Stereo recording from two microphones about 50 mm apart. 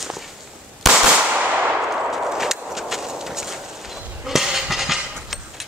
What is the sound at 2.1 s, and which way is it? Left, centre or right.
Horse, centre.